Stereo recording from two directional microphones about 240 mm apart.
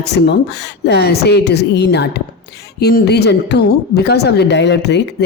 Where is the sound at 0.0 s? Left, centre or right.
Left.